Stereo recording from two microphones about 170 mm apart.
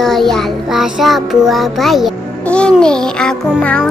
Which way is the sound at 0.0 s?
Centre (ahead or behind).